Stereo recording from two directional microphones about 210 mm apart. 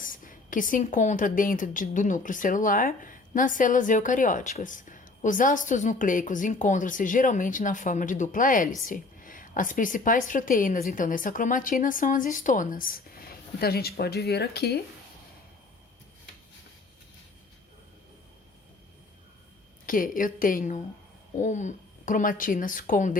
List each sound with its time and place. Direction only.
0.0 s a woman's voice: 40° left (ahead or behind)
19.8 s a woman's voice: 40° left (ahead or behind)